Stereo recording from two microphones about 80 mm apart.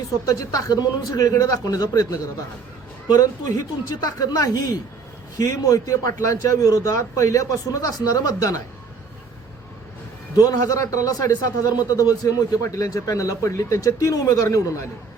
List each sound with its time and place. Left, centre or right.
0.3 s a man's voice: left
10.3 s a man's voice: left